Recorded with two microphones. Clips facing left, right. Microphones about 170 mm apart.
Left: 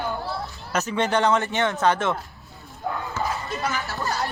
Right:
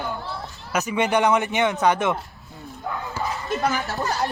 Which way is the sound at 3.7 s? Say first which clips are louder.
Right 4 dB; 20° right (ahead or behind).